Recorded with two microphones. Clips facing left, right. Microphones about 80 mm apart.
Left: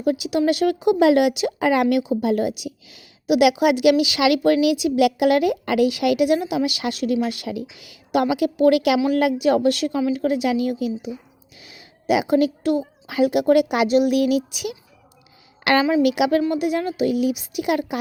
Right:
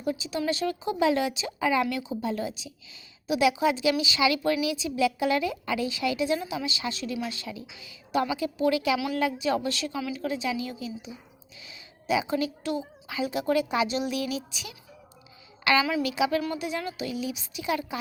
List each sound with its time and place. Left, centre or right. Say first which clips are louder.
0.0 s a woman's voice: left 9 dB; left
9.1 s a woman's voice: left 8 dB; left
15.8 s a woman's voice: left 8 dB; left
16.0 s speech: left 8 dB; left